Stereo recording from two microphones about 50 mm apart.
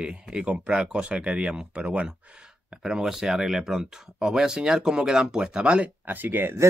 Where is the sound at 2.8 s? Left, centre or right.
Centre.